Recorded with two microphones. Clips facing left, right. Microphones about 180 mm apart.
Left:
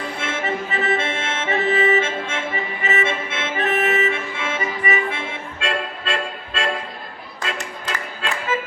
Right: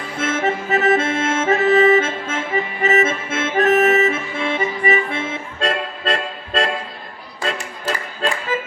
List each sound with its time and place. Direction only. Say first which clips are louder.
0.2 s accordion: right 7 dB; 40° right (ahead or behind)
8.2 s music: right 6 dB; 40° right (ahead or behind)